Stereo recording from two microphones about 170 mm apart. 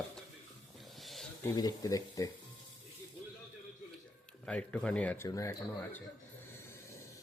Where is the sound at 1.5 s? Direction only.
20° left (ahead or behind).